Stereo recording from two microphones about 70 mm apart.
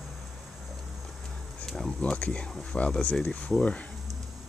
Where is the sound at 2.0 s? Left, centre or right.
Centre.